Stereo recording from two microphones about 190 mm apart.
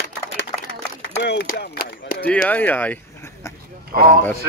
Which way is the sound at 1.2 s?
60° left (ahead or behind).